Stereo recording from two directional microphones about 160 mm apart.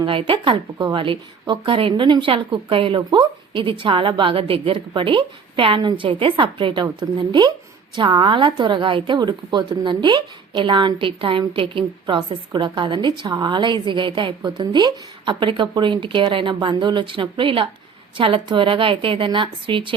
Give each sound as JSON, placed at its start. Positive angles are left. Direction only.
{"t": 0.0, "sound": "a woman's voice", "side_deg": -30}